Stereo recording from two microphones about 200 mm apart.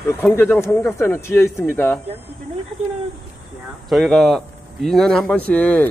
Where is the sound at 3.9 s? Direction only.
Centre (ahead or behind).